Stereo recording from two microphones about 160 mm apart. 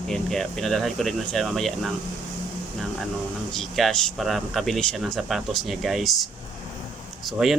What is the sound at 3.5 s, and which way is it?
Speech, centre (ahead or behind).